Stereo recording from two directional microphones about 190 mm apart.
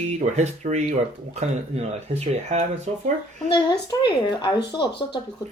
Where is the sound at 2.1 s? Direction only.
35° right (ahead or behind).